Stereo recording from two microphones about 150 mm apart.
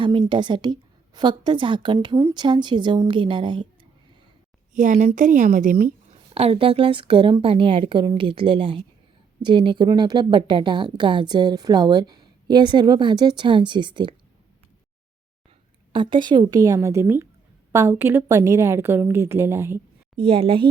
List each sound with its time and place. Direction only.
0.0 s speech: 35° right (ahead or behind)
4.7 s a woman's voice: 60° right (ahead or behind)
6.3 s speech: 40° right (ahead or behind)
15.9 s a woman's voice: 35° right (ahead or behind); by 19.8 s 15° right (ahead or behind)
20.1 s speech: 40° right (ahead or behind)